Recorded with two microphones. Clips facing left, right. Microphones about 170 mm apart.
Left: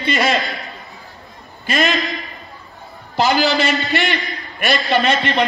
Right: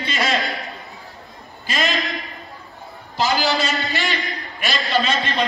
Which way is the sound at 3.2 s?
60° left (ahead or behind).